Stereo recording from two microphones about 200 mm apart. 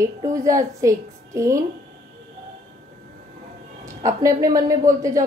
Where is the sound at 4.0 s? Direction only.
15° right (ahead or behind).